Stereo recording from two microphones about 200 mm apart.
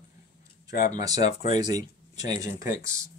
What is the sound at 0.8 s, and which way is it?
Speech, 35° left (ahead or behind).